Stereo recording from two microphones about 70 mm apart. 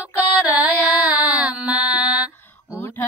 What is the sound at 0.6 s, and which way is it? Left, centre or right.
Child singing, right.